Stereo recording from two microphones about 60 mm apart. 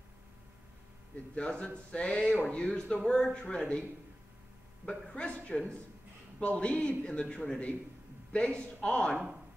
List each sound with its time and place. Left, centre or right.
1.3 s a man's voice: centre
4.8 s a woman's voice: centre